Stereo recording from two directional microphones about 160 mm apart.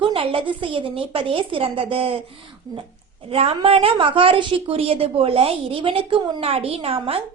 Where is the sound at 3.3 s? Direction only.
35° right (ahead or behind).